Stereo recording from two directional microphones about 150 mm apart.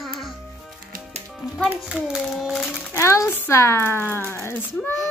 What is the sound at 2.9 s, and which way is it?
A child's voice, 20° left (ahead or behind).